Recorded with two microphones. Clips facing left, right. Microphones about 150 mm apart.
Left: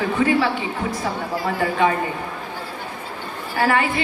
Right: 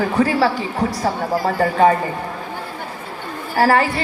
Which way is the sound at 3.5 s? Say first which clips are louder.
Right 4 dB; 35° right (ahead or behind).